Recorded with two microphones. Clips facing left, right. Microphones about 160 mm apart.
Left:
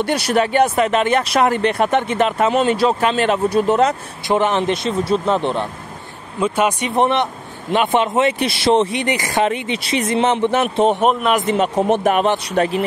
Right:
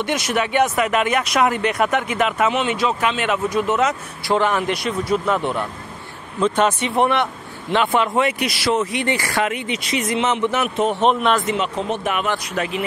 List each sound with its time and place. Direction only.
0.0 s speech: 35° left (ahead or behind)
4.3 s speech: 20° left (ahead or behind)
6.4 s speech: 10° left (ahead or behind); by 11.0 s 30° left (ahead or behind)
11.0 s speech: 5° left (ahead or behind)
11.5 s speech: 45° left (ahead or behind)